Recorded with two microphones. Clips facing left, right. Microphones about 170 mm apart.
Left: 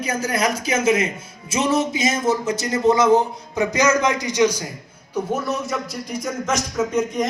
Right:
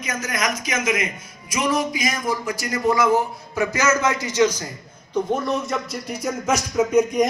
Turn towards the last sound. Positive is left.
turn(degrees=-10)  # may be behind; listen again after turning